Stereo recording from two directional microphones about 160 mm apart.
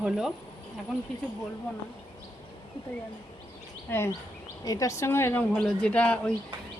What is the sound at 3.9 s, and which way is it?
A woman's voice, 10° left (ahead or behind).